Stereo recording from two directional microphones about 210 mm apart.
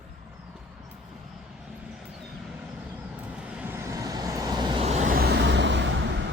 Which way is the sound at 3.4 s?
5° right (ahead or behind).